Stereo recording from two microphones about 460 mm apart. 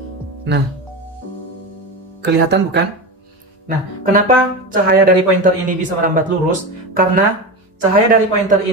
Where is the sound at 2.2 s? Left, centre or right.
Right.